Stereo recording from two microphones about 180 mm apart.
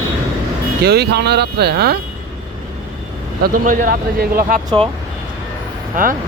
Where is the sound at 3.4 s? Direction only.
50° right (ahead or behind).